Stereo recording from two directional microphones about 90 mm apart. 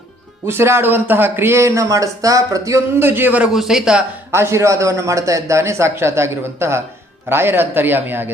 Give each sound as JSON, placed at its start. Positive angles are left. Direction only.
{"t": 0.4, "sound": "a man's voice", "side_deg": -30}
{"t": 3.5, "sound": "speech", "side_deg": -5}
{"t": 4.3, "sound": "a man's voice", "side_deg": -30}